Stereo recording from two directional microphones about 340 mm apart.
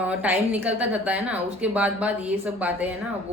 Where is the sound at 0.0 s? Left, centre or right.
Centre.